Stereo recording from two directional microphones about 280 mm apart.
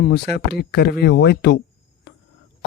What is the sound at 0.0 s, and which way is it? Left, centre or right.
Speech, left.